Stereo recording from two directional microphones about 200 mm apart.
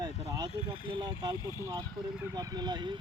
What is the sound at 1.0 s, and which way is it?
Speech, 20° right (ahead or behind).